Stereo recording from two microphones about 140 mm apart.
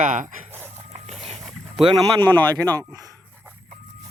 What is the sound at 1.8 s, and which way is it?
Speech, 35° right (ahead or behind).